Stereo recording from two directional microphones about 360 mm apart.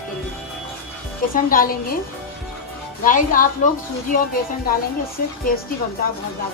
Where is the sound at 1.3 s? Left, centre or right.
Left.